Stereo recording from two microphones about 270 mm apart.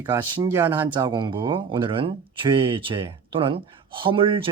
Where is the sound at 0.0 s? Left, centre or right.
Centre.